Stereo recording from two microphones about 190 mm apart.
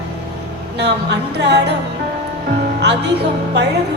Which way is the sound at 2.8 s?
65° right (ahead or behind).